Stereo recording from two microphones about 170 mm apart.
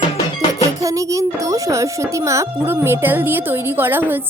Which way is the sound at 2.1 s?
15° right (ahead or behind).